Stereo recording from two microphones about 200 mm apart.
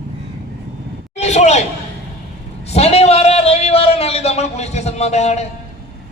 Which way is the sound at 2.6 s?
30° left (ahead or behind).